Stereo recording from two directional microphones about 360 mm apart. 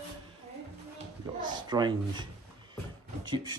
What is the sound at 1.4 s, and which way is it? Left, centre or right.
Speech, centre.